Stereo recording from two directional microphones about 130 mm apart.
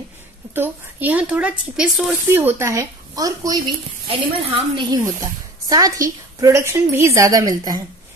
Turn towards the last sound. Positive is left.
turn(degrees=-30)  # may be behind; listen again after turning